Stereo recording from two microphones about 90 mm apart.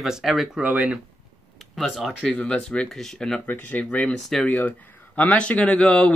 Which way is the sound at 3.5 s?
15° left (ahead or behind).